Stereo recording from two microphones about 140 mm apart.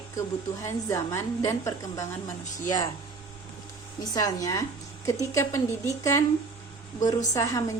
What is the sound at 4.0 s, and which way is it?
A woman's voice, 25° left (ahead or behind).